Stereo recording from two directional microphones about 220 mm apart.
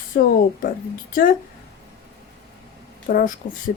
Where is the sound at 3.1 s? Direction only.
40° left (ahead or behind).